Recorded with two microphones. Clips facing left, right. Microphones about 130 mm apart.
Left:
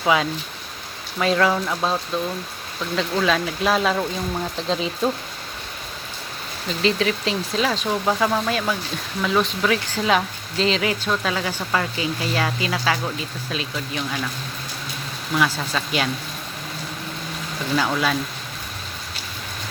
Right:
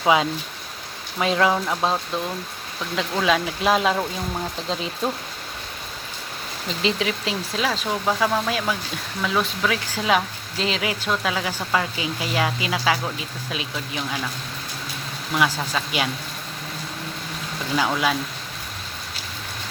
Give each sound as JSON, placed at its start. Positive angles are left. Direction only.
{"t": 0.0, "sound": "speech", "side_deg": -20}
{"t": 6.8, "sound": "speech", "side_deg": -10}
{"t": 15.4, "sound": "speech", "side_deg": -10}
{"t": 17.7, "sound": "speech", "side_deg": -10}